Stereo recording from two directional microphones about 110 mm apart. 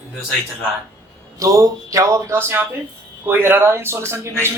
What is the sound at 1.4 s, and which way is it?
Speech, 30° right (ahead or behind).